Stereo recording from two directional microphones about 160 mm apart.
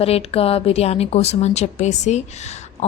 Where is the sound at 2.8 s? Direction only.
45° left (ahead or behind).